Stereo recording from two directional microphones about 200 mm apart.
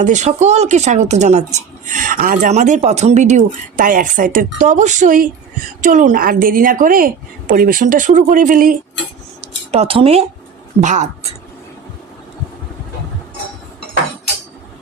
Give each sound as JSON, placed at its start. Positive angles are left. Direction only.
{"t": 0.0, "sound": "a woman's voice", "side_deg": -35}
{"t": 9.7, "sound": "speech", "side_deg": -25}